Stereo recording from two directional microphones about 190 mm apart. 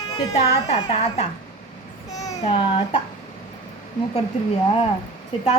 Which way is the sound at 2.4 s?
30° left (ahead or behind).